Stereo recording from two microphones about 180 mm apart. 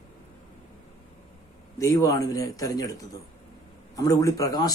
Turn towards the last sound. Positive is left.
turn(degrees=20)  # may be behind; listen again after turning